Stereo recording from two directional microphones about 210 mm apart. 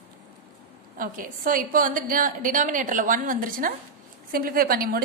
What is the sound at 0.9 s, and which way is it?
A woman's voice, 40° right (ahead or behind).